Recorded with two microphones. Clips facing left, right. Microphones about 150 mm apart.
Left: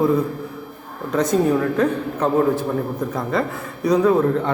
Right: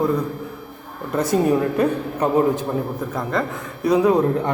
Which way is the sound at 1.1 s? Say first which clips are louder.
Left 1 dB; 5° right (ahead or behind).